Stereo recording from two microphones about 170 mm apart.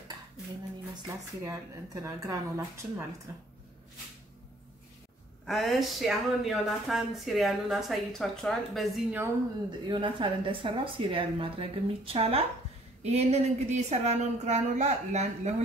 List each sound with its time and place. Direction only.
0.9 s speech: 20° right (ahead or behind)
5.5 s speech: centre (ahead or behind)
9.7 s a woman's voice: 30° right (ahead or behind)